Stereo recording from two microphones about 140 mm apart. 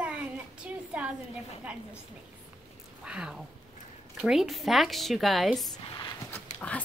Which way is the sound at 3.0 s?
5° right (ahead or behind).